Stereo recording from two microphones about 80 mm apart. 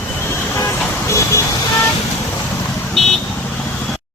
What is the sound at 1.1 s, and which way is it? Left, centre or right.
Vehicle, left.